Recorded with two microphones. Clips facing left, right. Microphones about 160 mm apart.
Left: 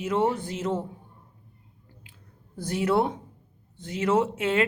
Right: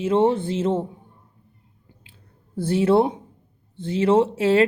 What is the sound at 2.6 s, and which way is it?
Speech, 30° right (ahead or behind).